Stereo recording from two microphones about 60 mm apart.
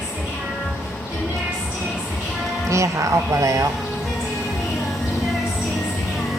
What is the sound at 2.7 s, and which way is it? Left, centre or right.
Speech, right.